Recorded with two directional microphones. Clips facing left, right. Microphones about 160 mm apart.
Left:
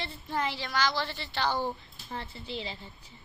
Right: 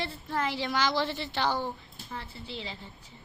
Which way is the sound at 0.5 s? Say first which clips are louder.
Right 2 dB; 20° right (ahead or behind).